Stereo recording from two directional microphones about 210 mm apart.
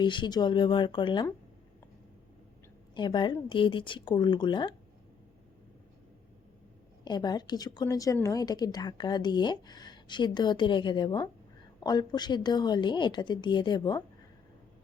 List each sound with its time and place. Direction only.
0.0 s a woman's voice: 20° left (ahead or behind)
2.9 s a woman's voice: 20° left (ahead or behind)
7.0 s a woman's voice: 20° left (ahead or behind)